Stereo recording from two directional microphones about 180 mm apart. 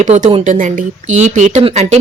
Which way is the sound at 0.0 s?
40° right (ahead or behind).